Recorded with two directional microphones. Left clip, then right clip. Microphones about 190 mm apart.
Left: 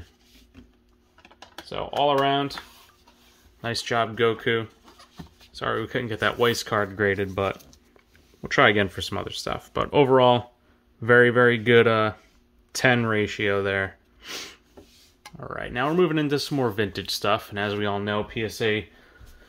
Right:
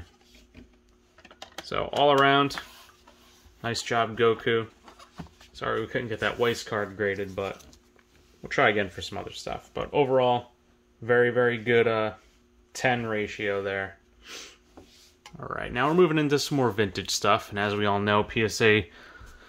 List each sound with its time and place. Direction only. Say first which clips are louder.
1.7 s speech: right 1 dB; 20° right (ahead or behind)
3.6 s speech: left 2 dB; 10° left (ahead or behind)
4.8 s a sound: right 1 dB; 5° right (ahead or behind)
5.5 s speech: left 2 dB; 15° left (ahead or behind); by 14.6 s 50° left (ahead or behind)
15.3 s speech: even; 5° left (ahead or behind); by 19.0 s 25° right (ahead or behind)